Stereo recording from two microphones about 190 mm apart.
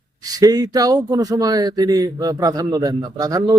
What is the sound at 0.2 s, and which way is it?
Speech, 20° right (ahead or behind).